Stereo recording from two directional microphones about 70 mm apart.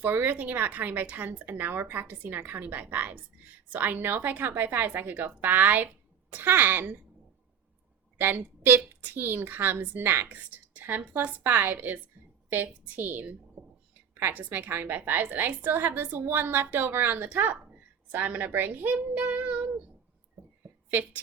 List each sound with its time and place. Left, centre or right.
0.0 s speech: right
8.2 s speech: right
20.9 s speech: right